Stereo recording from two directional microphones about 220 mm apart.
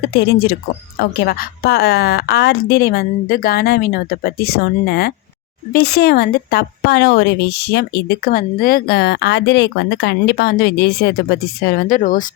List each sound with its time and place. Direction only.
0.1 s a woman's voice: 45° left (ahead or behind)